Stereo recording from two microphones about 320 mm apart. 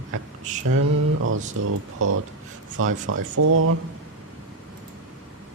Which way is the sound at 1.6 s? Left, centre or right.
Right.